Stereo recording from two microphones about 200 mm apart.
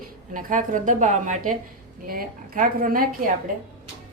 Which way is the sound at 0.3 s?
40° right (ahead or behind).